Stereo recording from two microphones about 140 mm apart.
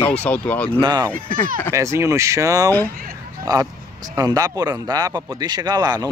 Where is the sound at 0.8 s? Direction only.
30° right (ahead or behind).